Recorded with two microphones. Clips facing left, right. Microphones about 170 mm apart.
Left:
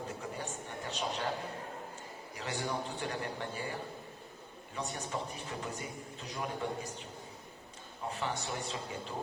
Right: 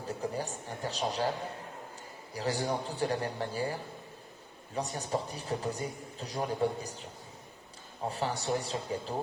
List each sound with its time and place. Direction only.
0.1 s a sound: 35° right (ahead or behind)
2.3 s a man's voice: 35° right (ahead or behind)
8.1 s a man's voice: 35° right (ahead or behind)